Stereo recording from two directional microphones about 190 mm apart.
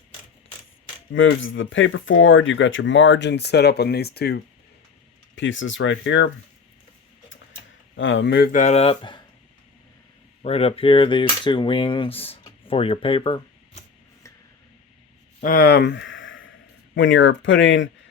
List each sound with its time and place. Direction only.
1.1 s speech: 85° left; by 4.4 s 55° left (ahead or behind)
5.3 s speech: 75° left (ahead or behind)
7.9 s speech: 85° left; by 8.4 s 65° left (ahead or behind)
8.5 s speech: 35° left (ahead or behind)
10.4 s cap gun: 30° left (ahead or behind)
15.4 s speech: 50° left (ahead or behind); by 16.5 s 90° left
16.9 s speech: 75° left (ahead or behind)